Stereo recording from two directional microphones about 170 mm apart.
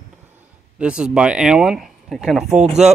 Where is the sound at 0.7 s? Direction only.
5° right (ahead or behind).